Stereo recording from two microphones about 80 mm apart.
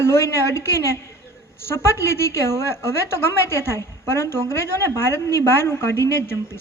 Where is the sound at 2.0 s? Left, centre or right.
Left.